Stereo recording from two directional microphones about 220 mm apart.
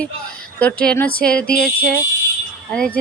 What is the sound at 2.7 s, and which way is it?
Speech, 5° left (ahead or behind).